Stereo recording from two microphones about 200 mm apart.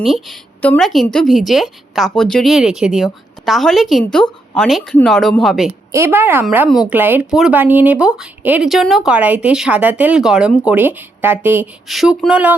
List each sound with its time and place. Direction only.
0.0 s a woman's voice: centre (ahead or behind)
5.9 s speech: 10° right (ahead or behind)